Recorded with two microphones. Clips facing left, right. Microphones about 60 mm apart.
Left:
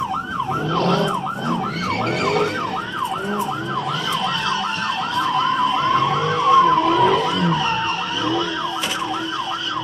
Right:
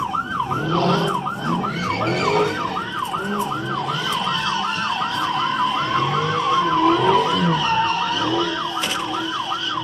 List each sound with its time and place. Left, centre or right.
0.7 s emergency vehicle: centre
5.9 s emergency vehicle: centre
7.5 s emergency vehicle: centre